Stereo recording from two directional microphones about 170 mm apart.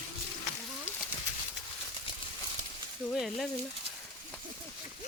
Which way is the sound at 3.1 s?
Centre (ahead or behind).